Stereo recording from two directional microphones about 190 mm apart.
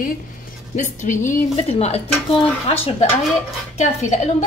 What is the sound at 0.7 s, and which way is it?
Speech, 40° left (ahead or behind).